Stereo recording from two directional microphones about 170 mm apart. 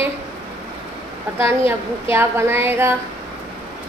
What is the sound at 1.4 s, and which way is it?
A woman's voice, 15° right (ahead or behind).